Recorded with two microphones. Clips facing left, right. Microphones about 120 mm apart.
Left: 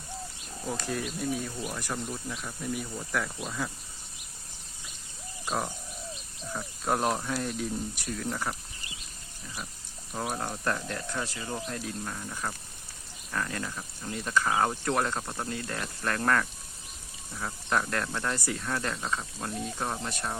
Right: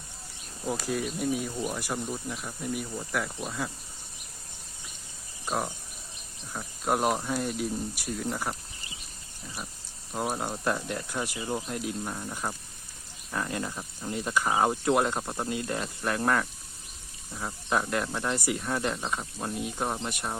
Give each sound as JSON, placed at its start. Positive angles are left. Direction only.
{"t": 0.7, "sound": "speech", "side_deg": -5}
{"t": 6.5, "sound": "speech", "side_deg": -5}
{"t": 10.1, "sound": "speech", "side_deg": -10}